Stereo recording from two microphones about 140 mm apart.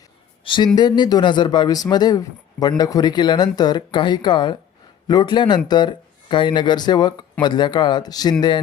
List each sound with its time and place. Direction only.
0.4 s a man's voice: 35° left (ahead or behind)